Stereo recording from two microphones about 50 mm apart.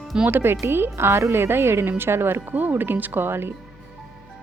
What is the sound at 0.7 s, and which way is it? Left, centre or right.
A woman's voice, right.